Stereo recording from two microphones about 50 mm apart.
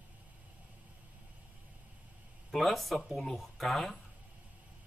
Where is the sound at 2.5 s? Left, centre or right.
Centre.